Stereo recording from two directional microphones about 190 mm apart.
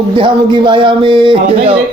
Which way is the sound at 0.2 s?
25° right (ahead or behind).